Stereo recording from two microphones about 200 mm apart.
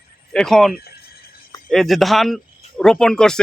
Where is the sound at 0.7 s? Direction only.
50° left (ahead or behind).